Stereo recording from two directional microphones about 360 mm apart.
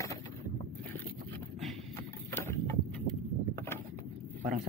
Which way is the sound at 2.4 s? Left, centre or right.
Centre.